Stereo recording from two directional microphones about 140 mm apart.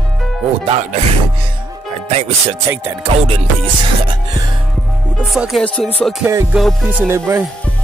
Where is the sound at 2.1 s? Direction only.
50° right (ahead or behind).